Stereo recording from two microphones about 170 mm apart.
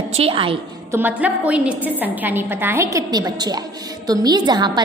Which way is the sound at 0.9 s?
10° right (ahead or behind).